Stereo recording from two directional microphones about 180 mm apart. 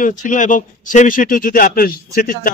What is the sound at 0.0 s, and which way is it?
Speech, 45° left (ahead or behind).